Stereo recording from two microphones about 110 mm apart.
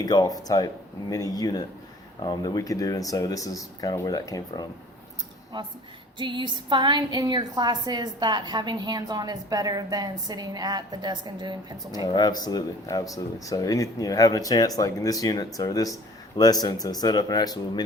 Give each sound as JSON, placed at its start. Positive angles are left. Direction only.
{"t": 0.0, "sound": "speech", "side_deg": 35}
{"t": 5.5, "sound": "a woman's voice", "side_deg": -45}
{"t": 12.0, "sound": "speech", "side_deg": 40}